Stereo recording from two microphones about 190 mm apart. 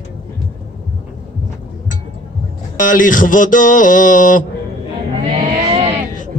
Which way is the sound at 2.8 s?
45° left (ahead or behind).